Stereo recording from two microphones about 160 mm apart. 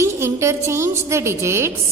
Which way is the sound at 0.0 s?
15° right (ahead or behind).